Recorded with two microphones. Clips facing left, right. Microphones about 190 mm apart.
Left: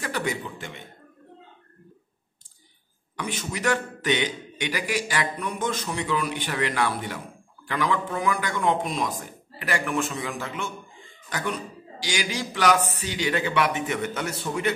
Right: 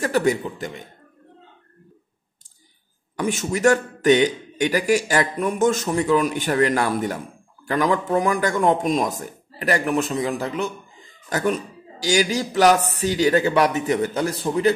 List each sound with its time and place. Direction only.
0.0 s a man's voice: 45° right (ahead or behind)
3.2 s a man's voice: 45° right (ahead or behind)